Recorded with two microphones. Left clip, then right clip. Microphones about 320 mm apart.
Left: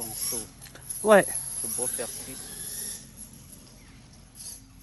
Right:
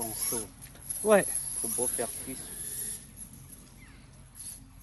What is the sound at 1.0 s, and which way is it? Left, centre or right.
Speech, left.